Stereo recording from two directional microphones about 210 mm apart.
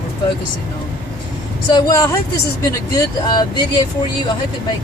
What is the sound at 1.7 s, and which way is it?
Speech, 15° left (ahead or behind).